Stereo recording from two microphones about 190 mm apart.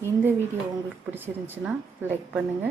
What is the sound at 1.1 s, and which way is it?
A woman's voice, 10° right (ahead or behind).